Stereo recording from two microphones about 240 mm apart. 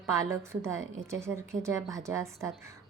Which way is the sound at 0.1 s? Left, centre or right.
Centre.